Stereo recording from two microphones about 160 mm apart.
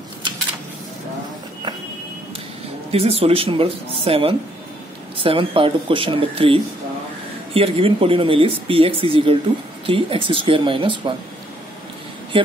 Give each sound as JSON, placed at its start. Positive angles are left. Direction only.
{"t": 2.9, "sound": "speech", "side_deg": -40}